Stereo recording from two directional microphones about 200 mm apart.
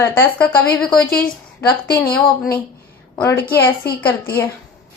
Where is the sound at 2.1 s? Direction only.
5° left (ahead or behind).